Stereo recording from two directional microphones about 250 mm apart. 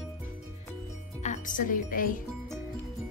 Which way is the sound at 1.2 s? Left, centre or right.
Left.